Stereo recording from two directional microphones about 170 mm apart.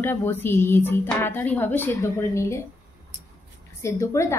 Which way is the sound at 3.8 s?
15° left (ahead or behind).